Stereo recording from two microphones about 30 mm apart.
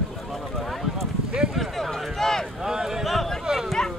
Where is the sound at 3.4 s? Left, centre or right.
Centre.